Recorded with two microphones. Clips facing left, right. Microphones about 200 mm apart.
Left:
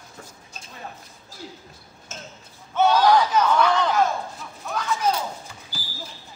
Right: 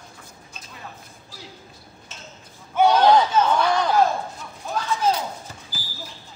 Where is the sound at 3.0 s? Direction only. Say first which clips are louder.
Right 2 dB; 25° right (ahead or behind).